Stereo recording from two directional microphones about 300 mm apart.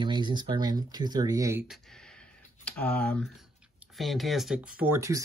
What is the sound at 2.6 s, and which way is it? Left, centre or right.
Speech, centre.